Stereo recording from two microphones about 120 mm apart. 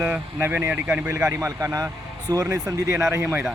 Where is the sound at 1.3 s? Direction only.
25° right (ahead or behind).